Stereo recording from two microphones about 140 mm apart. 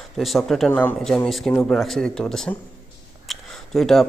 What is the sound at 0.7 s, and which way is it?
Speech, 15° left (ahead or behind).